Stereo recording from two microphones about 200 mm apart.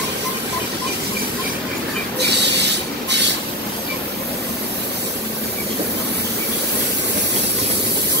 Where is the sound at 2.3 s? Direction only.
60° right (ahead or behind).